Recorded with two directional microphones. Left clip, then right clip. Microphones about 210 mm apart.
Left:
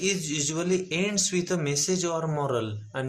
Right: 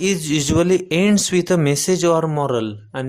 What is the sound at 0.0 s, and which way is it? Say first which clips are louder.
Speech: right 8 dB; 45° right (ahead or behind).